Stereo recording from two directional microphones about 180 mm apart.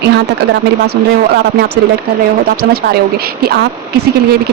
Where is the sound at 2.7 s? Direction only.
60° right (ahead or behind).